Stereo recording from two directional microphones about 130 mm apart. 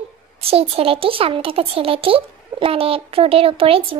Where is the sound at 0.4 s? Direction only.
50° right (ahead or behind).